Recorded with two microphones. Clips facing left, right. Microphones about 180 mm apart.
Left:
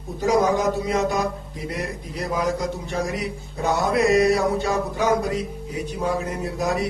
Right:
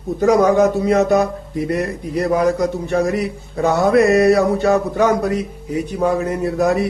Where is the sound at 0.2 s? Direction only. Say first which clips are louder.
Right 7 dB; 65° right (ahead or behind).